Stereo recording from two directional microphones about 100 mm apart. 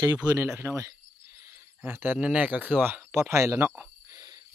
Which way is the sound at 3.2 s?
30° right (ahead or behind).